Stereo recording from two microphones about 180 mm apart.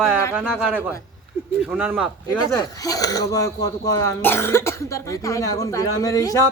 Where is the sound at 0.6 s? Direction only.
10° right (ahead or behind).